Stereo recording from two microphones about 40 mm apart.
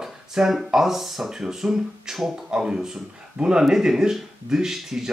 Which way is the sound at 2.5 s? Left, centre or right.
Centre.